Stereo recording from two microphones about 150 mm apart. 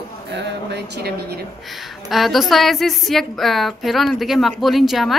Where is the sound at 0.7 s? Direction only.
90° right.